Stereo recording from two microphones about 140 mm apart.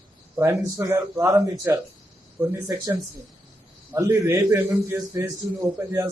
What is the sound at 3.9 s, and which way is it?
A man's voice, 15° right (ahead or behind).